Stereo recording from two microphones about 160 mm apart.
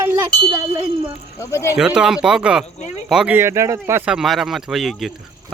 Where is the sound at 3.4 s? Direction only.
15° right (ahead or behind).